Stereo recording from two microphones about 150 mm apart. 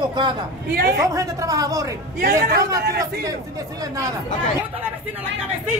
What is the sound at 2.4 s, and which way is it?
Speech, 90° right.